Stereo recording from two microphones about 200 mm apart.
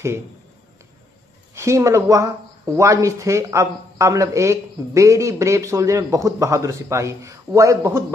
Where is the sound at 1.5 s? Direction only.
15° right (ahead or behind).